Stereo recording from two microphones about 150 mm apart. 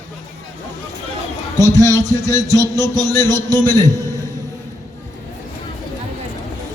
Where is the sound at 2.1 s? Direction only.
25° right (ahead or behind).